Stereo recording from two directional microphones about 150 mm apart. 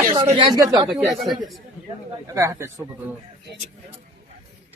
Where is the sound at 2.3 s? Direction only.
20° right (ahead or behind).